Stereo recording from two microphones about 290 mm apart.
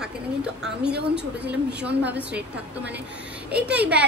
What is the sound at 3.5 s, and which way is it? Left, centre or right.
Speech, centre.